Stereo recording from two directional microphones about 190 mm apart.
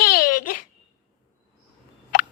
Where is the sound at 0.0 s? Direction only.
50° left (ahead or behind).